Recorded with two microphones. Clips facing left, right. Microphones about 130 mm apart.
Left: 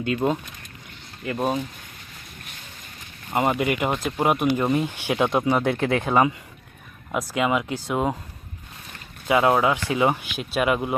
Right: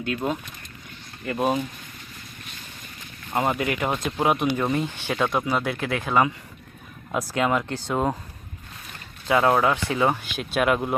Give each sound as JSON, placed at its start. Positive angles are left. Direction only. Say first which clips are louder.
{"t": 0.0, "sound": "speech", "louder": "left 4 dB", "side_deg": 20}
{"t": 1.2, "sound": "speech", "louder": "right 1 dB", "side_deg": 0}
{"t": 3.3, "sound": "speech", "louder": "left 2 dB", "side_deg": 5}
{"t": 7.3, "sound": "speech", "louder": "left 1 dB", "side_deg": 5}
{"t": 9.2, "sound": "speech", "louder": "left 1 dB", "side_deg": 15}
{"t": 10.3, "sound": "speech", "louder": "even", "side_deg": 5}